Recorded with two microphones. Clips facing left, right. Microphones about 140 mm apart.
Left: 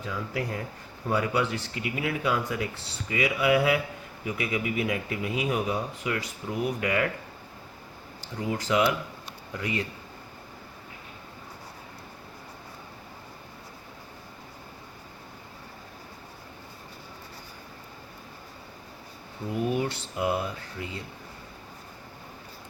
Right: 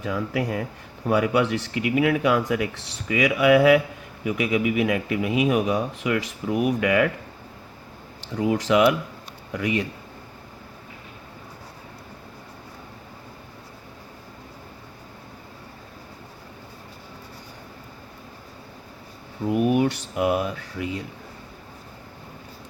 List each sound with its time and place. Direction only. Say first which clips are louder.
0.0 s speech: right 6 dB; 85° right
8.2 s speech: right 8 dB; 90° right
19.5 s speech: right 7 dB; 75° right (ahead or behind)